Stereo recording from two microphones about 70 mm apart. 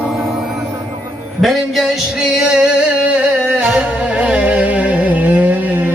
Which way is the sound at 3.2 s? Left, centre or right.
Centre.